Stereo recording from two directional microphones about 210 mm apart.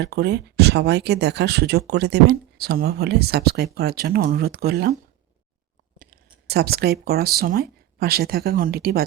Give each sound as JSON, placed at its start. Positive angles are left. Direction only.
{"t": 0.0, "sound": "speech", "side_deg": -50}
{"t": 6.5, "sound": "speech", "side_deg": -50}